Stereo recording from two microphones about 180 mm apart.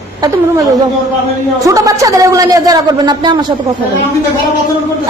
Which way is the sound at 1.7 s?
20° right (ahead or behind).